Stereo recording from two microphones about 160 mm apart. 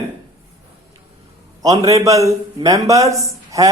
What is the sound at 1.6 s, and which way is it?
A man's voice, 20° right (ahead or behind).